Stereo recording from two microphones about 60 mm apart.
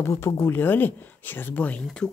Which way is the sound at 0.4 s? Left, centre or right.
Left.